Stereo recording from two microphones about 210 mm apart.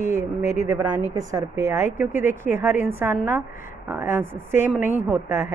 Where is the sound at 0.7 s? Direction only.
10° right (ahead or behind).